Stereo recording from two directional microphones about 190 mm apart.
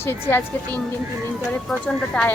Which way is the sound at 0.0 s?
10° left (ahead or behind).